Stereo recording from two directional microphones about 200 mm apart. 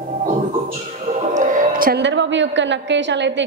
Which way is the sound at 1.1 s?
40° right (ahead or behind).